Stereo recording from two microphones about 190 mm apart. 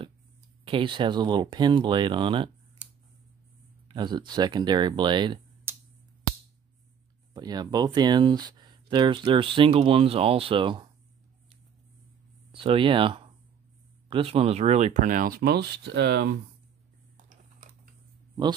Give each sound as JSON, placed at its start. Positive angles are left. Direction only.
{"t": 0.7, "sound": "speech", "side_deg": -25}
{"t": 3.9, "sound": "speech", "side_deg": -25}
{"t": 5.7, "sound": "a sound", "side_deg": -15}
{"t": 7.3, "sound": "speech", "side_deg": -20}
{"t": 12.5, "sound": "speech", "side_deg": -30}